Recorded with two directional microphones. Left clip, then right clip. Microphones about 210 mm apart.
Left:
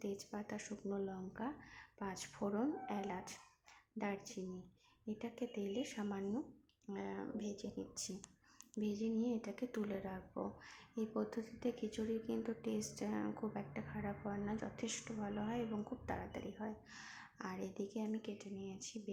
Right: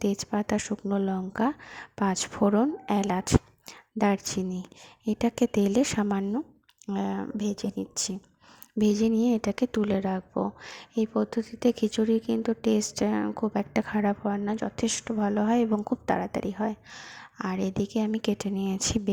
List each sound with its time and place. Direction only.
0.0 s speech: 45° right (ahead or behind)